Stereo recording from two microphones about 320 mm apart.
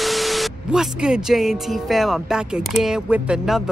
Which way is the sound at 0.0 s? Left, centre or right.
Centre.